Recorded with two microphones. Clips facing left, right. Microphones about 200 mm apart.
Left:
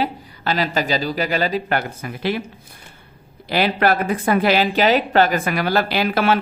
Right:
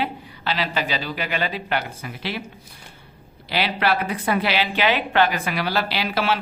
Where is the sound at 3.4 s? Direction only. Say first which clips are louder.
Left 5 dB; 45° left (ahead or behind).